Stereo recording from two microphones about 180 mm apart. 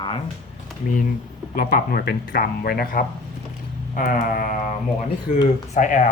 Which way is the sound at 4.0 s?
50° left (ahead or behind).